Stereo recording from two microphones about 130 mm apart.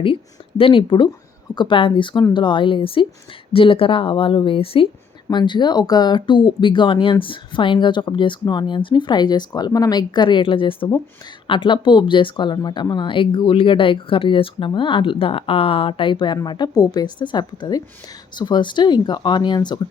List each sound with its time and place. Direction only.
0.0 s a woman's voice: 45° left (ahead or behind)
5.3 s speech: 35° left (ahead or behind)